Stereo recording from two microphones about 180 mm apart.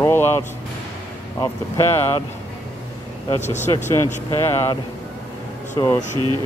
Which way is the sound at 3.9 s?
15° left (ahead or behind).